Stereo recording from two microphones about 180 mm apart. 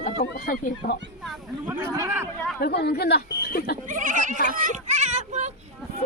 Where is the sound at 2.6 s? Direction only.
65° left (ahead or behind).